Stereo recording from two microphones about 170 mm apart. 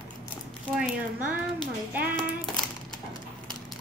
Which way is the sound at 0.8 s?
5° right (ahead or behind).